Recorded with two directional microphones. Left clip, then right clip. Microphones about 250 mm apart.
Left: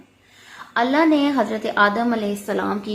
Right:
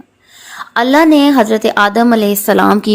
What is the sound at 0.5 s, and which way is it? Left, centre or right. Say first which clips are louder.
A woman's voice: right 9 dB; right.